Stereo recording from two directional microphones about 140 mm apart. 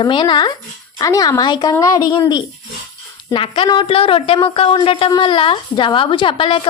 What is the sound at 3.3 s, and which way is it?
A woman's voice, 40° left (ahead or behind).